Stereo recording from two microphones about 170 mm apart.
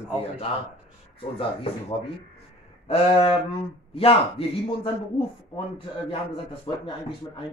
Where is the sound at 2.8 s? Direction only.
35° left (ahead or behind).